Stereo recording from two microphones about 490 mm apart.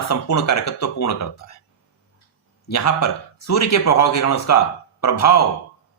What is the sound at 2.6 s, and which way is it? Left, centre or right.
A man's voice, left.